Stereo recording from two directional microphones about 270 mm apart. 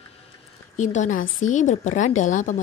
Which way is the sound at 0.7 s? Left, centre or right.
Left.